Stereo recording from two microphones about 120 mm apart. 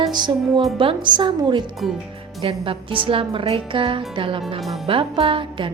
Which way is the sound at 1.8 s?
Centre (ahead or behind).